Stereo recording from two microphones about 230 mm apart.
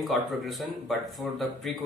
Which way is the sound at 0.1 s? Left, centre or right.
Centre.